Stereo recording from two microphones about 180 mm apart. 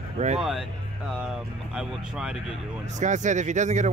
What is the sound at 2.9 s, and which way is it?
Speech, 40° right (ahead or behind).